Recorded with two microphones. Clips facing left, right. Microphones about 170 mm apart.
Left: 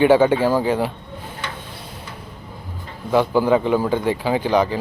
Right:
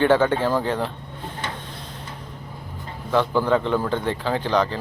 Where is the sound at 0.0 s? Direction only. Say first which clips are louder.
Left 4 dB; 10° left (ahead or behind).